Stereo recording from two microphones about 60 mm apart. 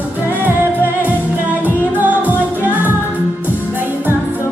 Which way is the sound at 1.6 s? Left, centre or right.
Right.